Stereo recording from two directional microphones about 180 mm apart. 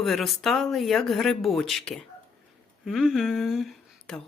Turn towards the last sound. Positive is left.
turn(degrees=0)  # may be behind; listen again after turning